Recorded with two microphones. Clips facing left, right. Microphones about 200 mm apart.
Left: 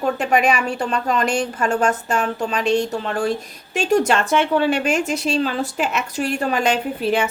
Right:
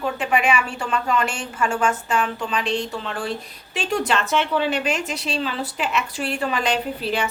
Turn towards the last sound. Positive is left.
turn(degrees=50)  # may be behind; listen again after turning